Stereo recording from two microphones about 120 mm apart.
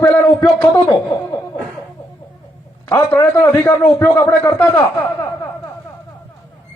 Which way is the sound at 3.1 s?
20° left (ahead or behind).